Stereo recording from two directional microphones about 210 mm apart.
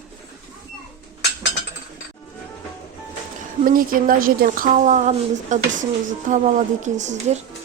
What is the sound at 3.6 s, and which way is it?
A woman's voice, 40° right (ahead or behind).